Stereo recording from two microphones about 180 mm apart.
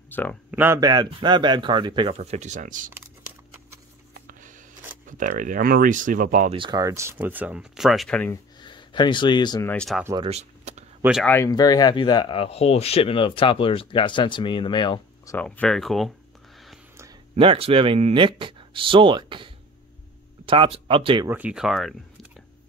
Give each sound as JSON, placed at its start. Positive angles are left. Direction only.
{"t": 0.1, "sound": "speech", "side_deg": 10}
{"t": 0.5, "sound": "speech", "side_deg": -10}
{"t": 2.1, "sound": "speech", "side_deg": -40}
{"t": 4.1, "sound": "a sound", "side_deg": -50}
{"t": 5.0, "sound": "speech", "side_deg": -45}
{"t": 6.5, "sound": "speech", "side_deg": -25}
{"t": 8.3, "sound": "speech", "side_deg": 25}
{"t": 9.7, "sound": "speech", "side_deg": 5}
{"t": 10.2, "sound": "a sound", "side_deg": -35}
{"t": 11.0, "sound": "speech", "side_deg": -5}
{"t": 11.2, "sound": "speech", "side_deg": 15}
{"t": 15.3, "sound": "speech", "side_deg": 10}
{"t": 17.4, "sound": "speech", "side_deg": -30}
{"t": 21.3, "sound": "speech", "side_deg": -5}